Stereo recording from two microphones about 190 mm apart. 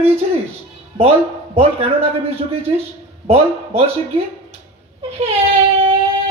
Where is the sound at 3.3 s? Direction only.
30° right (ahead or behind).